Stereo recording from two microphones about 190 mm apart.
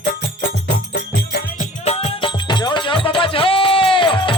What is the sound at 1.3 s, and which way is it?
Music, 50° left (ahead or behind).